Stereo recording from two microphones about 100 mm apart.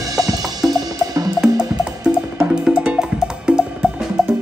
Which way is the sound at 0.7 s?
40° right (ahead or behind).